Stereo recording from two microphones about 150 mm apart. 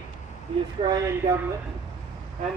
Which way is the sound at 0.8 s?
40° right (ahead or behind).